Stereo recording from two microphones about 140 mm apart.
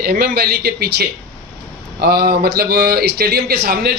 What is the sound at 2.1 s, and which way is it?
A man's voice, 90° right.